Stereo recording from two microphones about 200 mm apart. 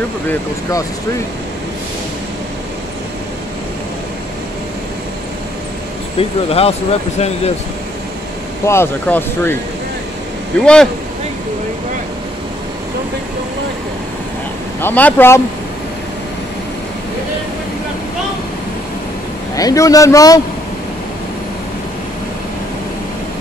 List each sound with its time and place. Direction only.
0.3 s speech: 15° left (ahead or behind)
6.1 s speech: 30° left (ahead or behind)
8.6 s speech: 10° left (ahead or behind)
10.6 s speech: 5° left (ahead or behind)
14.8 s speech: 10° left (ahead or behind)
19.5 s speech: 15° left (ahead or behind)